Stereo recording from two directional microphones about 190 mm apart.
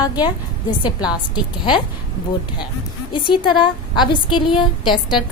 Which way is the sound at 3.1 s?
25° left (ahead or behind).